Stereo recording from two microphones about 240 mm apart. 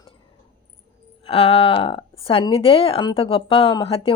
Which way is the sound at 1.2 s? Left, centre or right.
Left.